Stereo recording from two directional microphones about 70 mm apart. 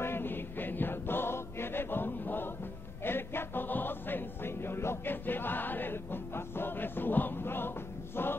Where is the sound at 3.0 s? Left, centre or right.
Left.